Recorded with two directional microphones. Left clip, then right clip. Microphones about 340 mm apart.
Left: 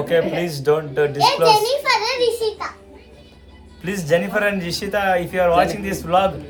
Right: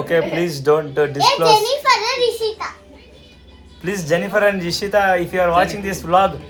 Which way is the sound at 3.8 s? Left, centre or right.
Centre.